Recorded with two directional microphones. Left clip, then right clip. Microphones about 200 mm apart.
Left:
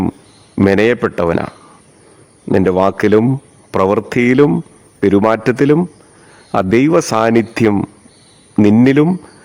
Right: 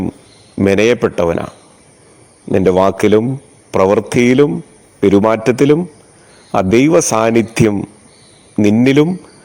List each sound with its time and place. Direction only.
0.6 s speech: 5° left (ahead or behind)
8.8 s speech: 5° left (ahead or behind)